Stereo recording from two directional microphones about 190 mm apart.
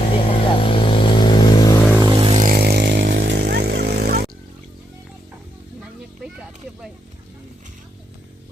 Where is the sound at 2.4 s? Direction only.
55° right (ahead or behind).